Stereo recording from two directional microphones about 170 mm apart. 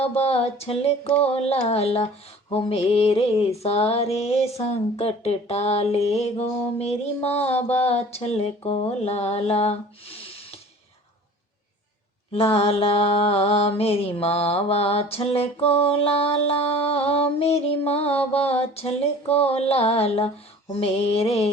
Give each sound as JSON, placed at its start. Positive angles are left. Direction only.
{"t": 0.0, "sound": "mantra", "side_deg": 35}
{"t": 12.3, "sound": "mantra", "side_deg": 35}